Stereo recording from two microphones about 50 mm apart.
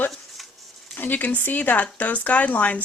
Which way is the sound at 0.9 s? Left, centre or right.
Left.